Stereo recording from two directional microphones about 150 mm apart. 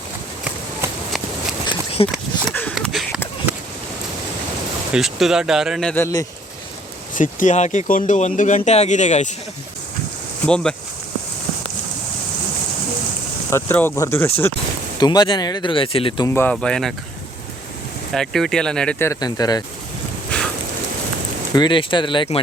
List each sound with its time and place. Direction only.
2.0 s speech: 40° left (ahead or behind)
2.5 s a sound: 10° left (ahead or behind)
2.7 s a sound: centre (ahead or behind)
4.9 s speech: centre (ahead or behind)
5.9 s speech: 20° left (ahead or behind)
7.1 s speech: 60° left (ahead or behind)
10.4 s speech: 5° left (ahead or behind)
13.5 s speech: 15° left (ahead or behind)
14.9 s speech: 25° left (ahead or behind)
16.2 s speech: 15° left (ahead or behind)
18.1 s speech: centre (ahead or behind)
18.9 s speech: 20° left (ahead or behind)
21.5 s speech: 30° left (ahead or behind)